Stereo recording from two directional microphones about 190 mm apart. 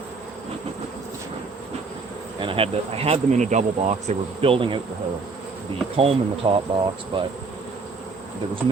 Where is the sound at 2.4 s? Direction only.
30° right (ahead or behind).